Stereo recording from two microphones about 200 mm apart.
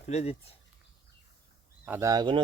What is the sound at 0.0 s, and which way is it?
Speech, 35° left (ahead or behind).